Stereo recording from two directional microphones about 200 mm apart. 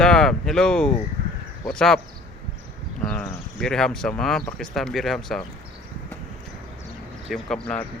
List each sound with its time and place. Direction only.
0.0 s speech: 5° left (ahead or behind)
1.2 s a sound: 55° right (ahead or behind)
1.6 s speech: 5° left (ahead or behind)
3.1 s speech: 5° left (ahead or behind)
7.3 s speech: centre (ahead or behind)